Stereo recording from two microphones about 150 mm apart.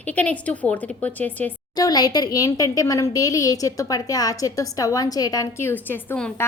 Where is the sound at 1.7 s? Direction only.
25° left (ahead or behind).